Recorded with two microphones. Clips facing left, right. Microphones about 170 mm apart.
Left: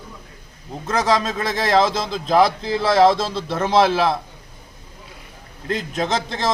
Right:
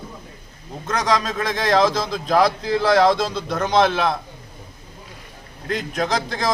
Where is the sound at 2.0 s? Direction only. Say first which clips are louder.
Left 1 dB; centre (ahead or behind).